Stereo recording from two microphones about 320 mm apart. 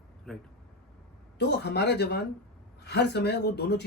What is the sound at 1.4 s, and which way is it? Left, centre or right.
Speech, left.